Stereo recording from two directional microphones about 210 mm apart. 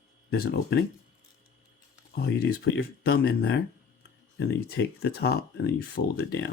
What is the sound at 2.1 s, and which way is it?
Speech, 45° left (ahead or behind).